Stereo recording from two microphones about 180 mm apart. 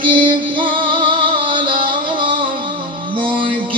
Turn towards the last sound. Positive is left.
turn(degrees=-30)  # may be behind; listen again after turning